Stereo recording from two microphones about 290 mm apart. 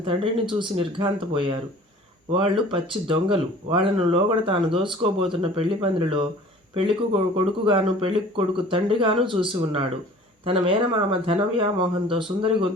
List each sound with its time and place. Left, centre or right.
0.0 s speech: centre